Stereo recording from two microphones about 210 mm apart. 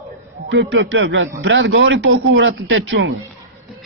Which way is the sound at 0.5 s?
65° right (ahead or behind).